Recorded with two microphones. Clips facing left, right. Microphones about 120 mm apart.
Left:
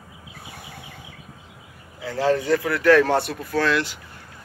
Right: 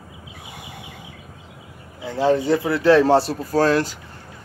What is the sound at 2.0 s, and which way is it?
Speech, 20° right (ahead or behind).